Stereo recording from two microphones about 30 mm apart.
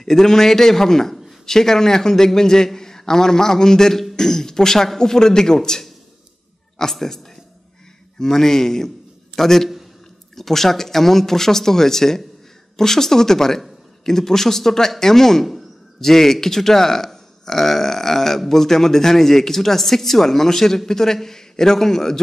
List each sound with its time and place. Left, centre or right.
0.0 s a woman's voice: centre